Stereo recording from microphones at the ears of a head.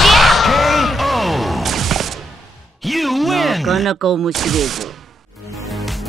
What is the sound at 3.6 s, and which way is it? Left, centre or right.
Speech, right.